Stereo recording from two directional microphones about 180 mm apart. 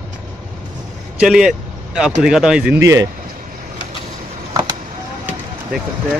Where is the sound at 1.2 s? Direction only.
5° right (ahead or behind).